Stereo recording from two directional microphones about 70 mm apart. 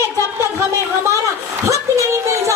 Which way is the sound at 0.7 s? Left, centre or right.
Right.